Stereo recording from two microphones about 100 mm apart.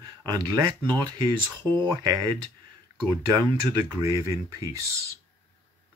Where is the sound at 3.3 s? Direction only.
35° right (ahead or behind).